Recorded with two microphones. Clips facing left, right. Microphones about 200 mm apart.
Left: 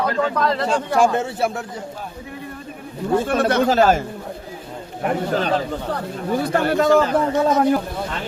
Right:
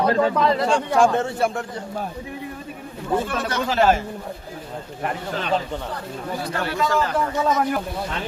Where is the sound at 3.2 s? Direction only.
55° left (ahead or behind).